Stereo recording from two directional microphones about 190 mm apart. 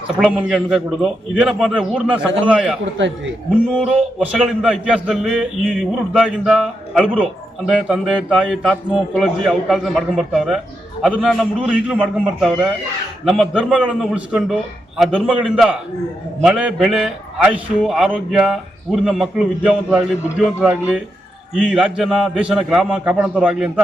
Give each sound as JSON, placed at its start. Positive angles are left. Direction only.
{"t": 0.2, "sound": "a man's voice", "side_deg": -5}
{"t": 3.7, "sound": "a man's voice", "side_deg": -5}